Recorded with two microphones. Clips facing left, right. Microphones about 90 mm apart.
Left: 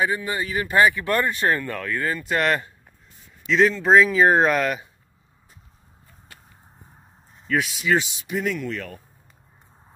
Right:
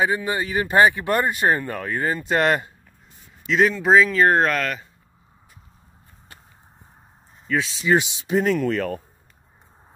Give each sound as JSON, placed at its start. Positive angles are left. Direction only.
{"t": 0.0, "sound": "speech", "side_deg": -25}
{"t": 3.4, "sound": "speech", "side_deg": -5}
{"t": 7.8, "sound": "speech", "side_deg": -25}
{"t": 8.5, "sound": "speech", "side_deg": -45}